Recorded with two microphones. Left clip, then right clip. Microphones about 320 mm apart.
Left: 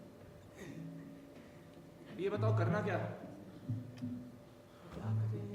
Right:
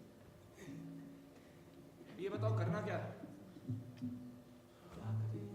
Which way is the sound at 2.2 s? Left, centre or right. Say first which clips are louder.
Left 5 dB; left.